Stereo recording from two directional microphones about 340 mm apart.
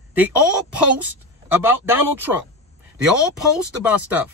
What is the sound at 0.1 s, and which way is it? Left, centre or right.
Speech, centre.